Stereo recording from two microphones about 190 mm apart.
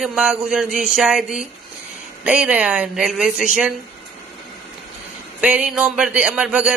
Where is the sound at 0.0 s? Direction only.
5° right (ahead or behind).